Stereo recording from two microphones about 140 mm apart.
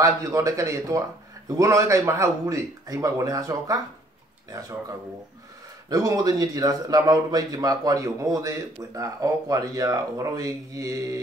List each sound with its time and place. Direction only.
0.0 s a man's voice: 25° right (ahead or behind)
5.9 s a man's voice: 25° right (ahead or behind)